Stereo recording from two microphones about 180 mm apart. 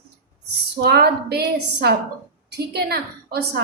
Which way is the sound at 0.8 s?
60° right (ahead or behind).